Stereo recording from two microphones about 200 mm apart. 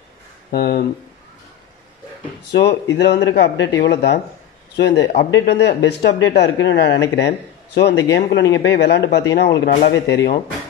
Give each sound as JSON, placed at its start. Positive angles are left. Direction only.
{"t": 0.5, "sound": "speech", "side_deg": 50}
{"t": 3.0, "sound": "speech", "side_deg": 60}